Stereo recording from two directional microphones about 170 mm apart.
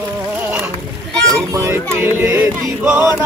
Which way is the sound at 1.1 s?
5° left (ahead or behind).